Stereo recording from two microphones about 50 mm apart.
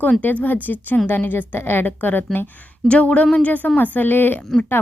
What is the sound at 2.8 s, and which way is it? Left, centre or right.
Speech, left.